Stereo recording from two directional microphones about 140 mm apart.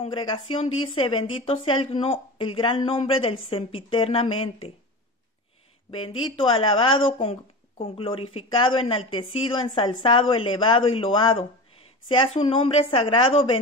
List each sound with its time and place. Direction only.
0.0 s speech: 40° left (ahead or behind)
5.9 s speech: 40° left (ahead or behind)